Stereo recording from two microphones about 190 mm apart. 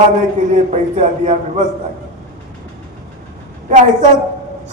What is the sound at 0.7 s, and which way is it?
Speech, 40° right (ahead or behind).